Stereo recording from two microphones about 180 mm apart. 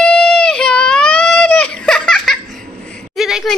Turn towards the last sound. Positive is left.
turn(degrees=0)  # may be behind; listen again after turning